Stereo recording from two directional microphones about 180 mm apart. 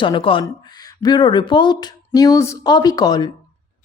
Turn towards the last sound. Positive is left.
turn(degrees=20)  # may be behind; listen again after turning